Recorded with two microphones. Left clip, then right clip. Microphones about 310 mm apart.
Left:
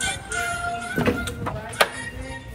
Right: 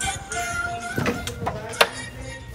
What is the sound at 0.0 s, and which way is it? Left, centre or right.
Music, right.